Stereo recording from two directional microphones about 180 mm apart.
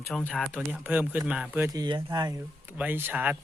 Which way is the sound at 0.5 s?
10° right (ahead or behind).